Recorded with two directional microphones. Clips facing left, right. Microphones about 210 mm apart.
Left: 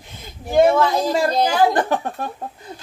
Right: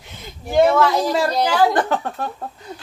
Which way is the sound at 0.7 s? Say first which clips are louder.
Right 1 dB; 15° left (ahead or behind).